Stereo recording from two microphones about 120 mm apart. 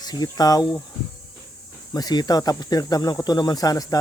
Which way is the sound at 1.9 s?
35° left (ahead or behind).